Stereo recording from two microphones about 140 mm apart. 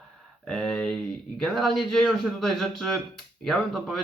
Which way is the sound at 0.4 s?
5° left (ahead or behind).